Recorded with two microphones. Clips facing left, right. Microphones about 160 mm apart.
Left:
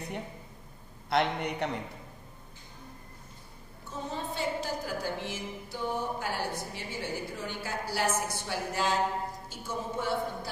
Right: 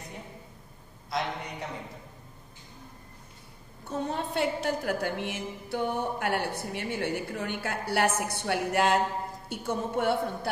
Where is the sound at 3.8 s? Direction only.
65° right (ahead or behind).